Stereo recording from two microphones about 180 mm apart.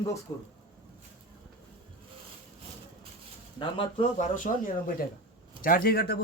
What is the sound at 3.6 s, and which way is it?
Speech, 25° left (ahead or behind).